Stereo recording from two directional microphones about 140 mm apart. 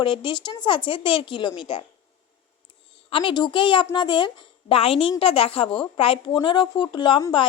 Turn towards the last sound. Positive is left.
turn(degrees=35)  # may be behind; listen again after turning